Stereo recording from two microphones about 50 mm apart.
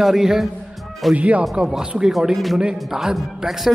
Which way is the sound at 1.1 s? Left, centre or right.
Right.